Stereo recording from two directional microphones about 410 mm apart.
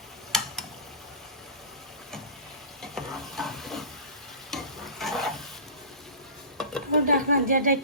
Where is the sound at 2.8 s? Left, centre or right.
Centre.